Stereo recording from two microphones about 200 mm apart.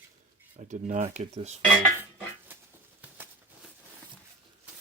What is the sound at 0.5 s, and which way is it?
Speech, 40° right (ahead or behind).